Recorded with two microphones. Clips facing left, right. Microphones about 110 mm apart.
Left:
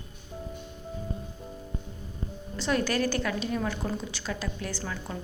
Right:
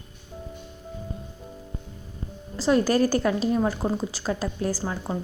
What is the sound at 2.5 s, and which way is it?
A woman's voice, 35° right (ahead or behind).